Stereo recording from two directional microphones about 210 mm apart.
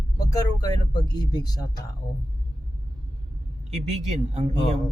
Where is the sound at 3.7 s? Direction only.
30° right (ahead or behind).